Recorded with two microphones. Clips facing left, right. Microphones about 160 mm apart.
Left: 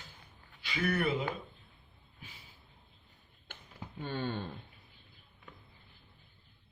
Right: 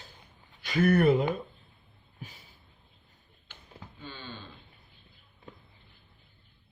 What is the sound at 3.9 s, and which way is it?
Speech, 55° left (ahead or behind).